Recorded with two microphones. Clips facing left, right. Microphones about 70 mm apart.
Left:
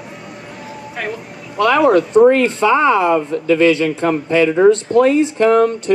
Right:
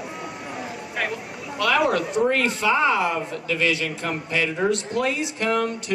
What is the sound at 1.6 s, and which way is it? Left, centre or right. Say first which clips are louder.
Speech: left 9 dB; left.